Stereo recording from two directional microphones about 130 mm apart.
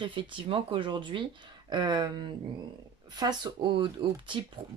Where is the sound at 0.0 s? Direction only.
40° right (ahead or behind).